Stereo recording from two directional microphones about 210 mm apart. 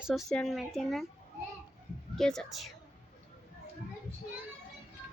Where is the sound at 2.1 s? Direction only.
Centre (ahead or behind).